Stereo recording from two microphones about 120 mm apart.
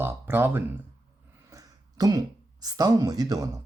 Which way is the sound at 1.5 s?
30° right (ahead or behind).